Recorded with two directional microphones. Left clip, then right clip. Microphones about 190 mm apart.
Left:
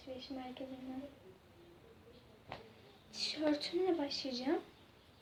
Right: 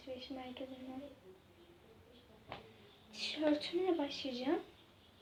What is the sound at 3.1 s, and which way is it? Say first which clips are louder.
A woman's voice: right 1 dB; centre (ahead or behind).